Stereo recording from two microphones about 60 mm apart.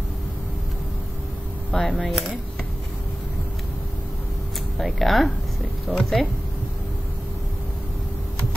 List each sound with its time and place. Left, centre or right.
1.7 s speech: centre
4.7 s speech: centre
5.9 s speech: centre